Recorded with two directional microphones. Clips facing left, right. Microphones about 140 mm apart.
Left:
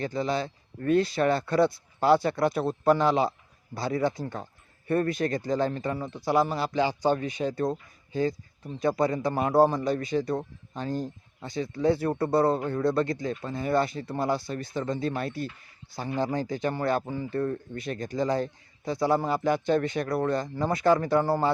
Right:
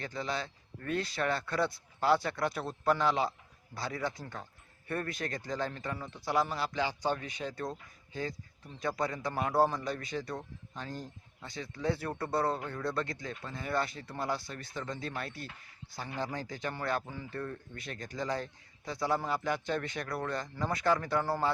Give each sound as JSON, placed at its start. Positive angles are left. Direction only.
{"t": 0.0, "sound": "speech", "side_deg": 25}
{"t": 8.8, "sound": "speech", "side_deg": 30}
{"t": 10.2, "sound": "speech", "side_deg": 35}